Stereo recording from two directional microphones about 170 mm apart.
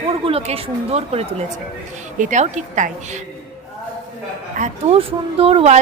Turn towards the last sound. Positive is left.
turn(degrees=-40)  # may be behind; listen again after turning